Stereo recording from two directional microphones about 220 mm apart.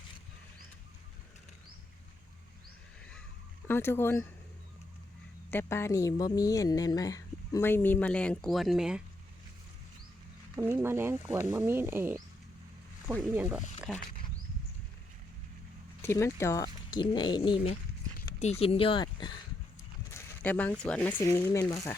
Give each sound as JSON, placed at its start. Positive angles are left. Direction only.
{"t": 3.7, "sound": "a woman's voice", "side_deg": 10}
{"t": 5.5, "sound": "a woman's voice", "side_deg": 10}
{"t": 10.6, "sound": "speech", "side_deg": -10}
{"t": 13.3, "sound": "speech", "side_deg": -5}
{"t": 16.0, "sound": "speech", "side_deg": 10}